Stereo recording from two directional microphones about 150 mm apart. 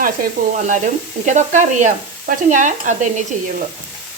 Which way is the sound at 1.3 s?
55° right (ahead or behind).